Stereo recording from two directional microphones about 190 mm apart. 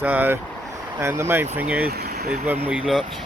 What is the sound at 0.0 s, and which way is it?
Speech, 10° right (ahead or behind).